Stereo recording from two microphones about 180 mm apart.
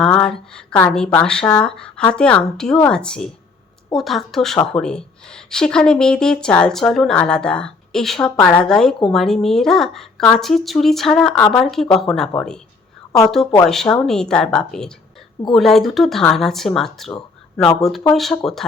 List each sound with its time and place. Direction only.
0.0 s speech: 5° left (ahead or behind)